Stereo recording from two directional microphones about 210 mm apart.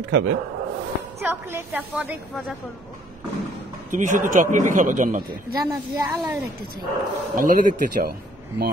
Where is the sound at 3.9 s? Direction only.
35° right (ahead or behind).